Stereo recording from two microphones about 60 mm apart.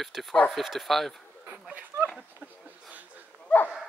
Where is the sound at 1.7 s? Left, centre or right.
Right.